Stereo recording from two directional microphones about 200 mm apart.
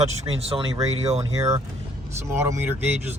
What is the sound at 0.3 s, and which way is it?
Speech, 30° right (ahead or behind).